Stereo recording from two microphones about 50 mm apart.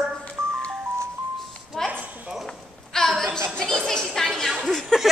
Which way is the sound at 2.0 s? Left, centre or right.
Right.